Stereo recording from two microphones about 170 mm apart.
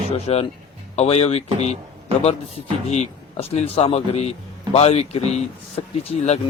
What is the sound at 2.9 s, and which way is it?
A man's voice, 40° left (ahead or behind).